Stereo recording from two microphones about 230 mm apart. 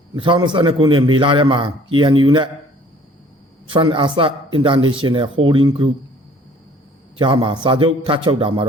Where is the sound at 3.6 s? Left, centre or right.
Right.